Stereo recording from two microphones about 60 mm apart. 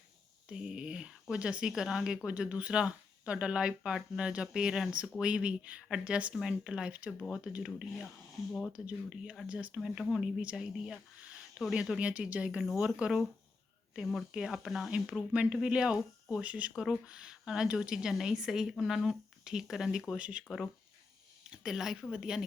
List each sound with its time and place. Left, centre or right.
0.4 s speech: centre
15.3 s speech: centre
20.1 s speech: centre
21.5 s speech: centre